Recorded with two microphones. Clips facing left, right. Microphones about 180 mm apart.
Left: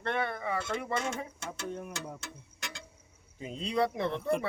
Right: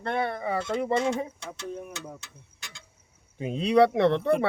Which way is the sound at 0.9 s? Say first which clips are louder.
Right 8 dB; 25° right (ahead or behind).